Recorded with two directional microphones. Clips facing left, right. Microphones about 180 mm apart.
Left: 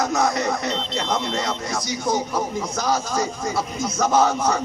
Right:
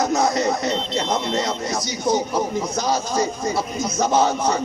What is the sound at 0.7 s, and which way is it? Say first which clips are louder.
Speech: right 2 dB; centre (ahead or behind).